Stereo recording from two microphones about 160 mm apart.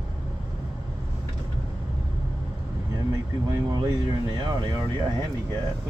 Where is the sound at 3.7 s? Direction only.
25° right (ahead or behind).